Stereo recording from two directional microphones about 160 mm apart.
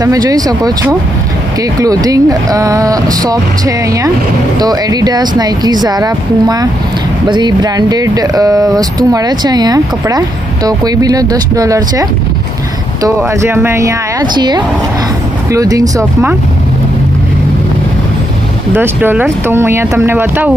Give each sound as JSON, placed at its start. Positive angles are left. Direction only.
{"t": 0.0, "sound": "speech", "side_deg": -20}
{"t": 1.8, "sound": "speech", "side_deg": -25}
{"t": 18.7, "sound": "speech", "side_deg": -15}